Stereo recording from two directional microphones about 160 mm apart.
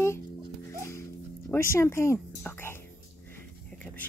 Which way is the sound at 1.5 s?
15° left (ahead or behind).